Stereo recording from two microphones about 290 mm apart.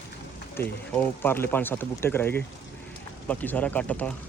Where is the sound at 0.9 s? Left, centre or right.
Centre.